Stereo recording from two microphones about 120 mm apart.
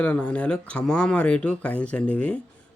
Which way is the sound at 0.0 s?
10° left (ahead or behind).